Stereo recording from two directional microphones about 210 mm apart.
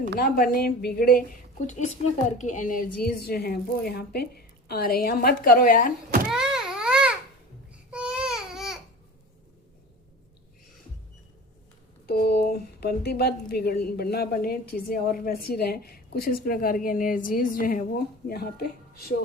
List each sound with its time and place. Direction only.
0.2 s a woman's voice: 40° left (ahead or behind)
6.2 s a sound: 5° right (ahead or behind)
7.9 s baby cry: 5° right (ahead or behind)
12.0 s a woman's voice: 45° left (ahead or behind)